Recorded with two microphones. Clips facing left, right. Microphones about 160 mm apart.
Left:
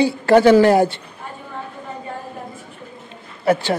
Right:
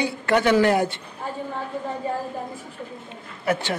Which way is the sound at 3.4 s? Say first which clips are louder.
Left 6 dB; 35° left (ahead or behind).